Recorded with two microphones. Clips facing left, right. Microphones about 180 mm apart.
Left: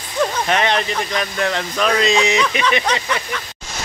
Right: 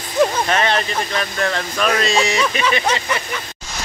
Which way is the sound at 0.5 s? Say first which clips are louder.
Even; 15° left (ahead or behind).